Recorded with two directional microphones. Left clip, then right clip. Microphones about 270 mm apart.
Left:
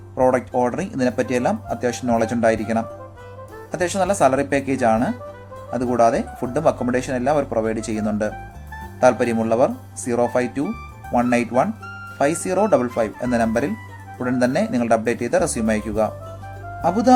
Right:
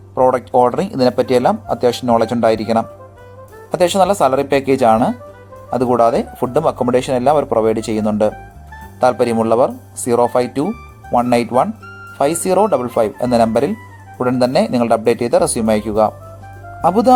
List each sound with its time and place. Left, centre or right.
0.2 s speech: centre
12.7 s speech: centre